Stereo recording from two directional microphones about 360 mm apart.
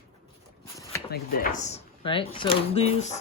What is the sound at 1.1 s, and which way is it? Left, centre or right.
Speech, left.